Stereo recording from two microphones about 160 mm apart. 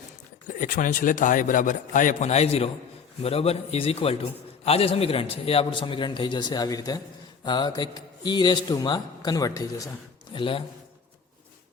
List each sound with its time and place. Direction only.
0.4 s a man's voice: 55° left (ahead or behind); by 9.9 s 20° left (ahead or behind)
10.3 s a man's voice: 30° left (ahead or behind)